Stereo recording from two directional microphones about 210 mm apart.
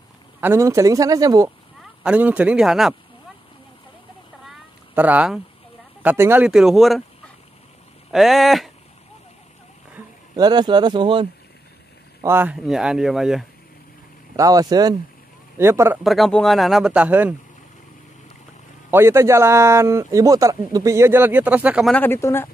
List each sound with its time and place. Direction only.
0.4 s speech: 10° right (ahead or behind)
4.5 s cat: 5° right (ahead or behind)
6.0 s speech: 10° right (ahead or behind)
8.1 s speech: centre (ahead or behind)
9.9 s speech: 20° right (ahead or behind)
12.2 s speech: 10° right (ahead or behind)
14.3 s speech: 15° right (ahead or behind)
16.0 s speech: centre (ahead or behind)
18.9 s speech: 10° right (ahead or behind)
21.9 s speech: 10° left (ahead or behind)